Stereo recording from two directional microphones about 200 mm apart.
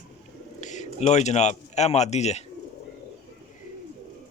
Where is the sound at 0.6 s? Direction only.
35° left (ahead or behind).